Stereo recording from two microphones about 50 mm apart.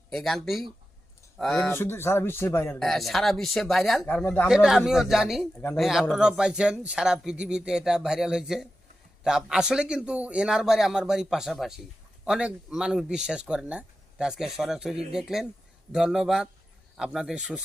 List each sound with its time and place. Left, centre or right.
0.1 s speech: centre
1.7 s speech: left
2.7 s speech: centre
4.0 s speech: left
4.4 s speech: centre
10.4 s a man's voice: centre